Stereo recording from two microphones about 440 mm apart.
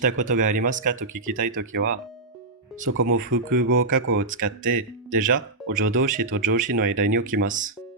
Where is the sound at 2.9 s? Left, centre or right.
Right.